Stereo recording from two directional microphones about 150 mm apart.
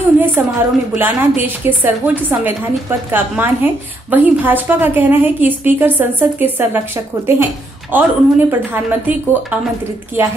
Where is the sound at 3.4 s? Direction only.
10° right (ahead or behind).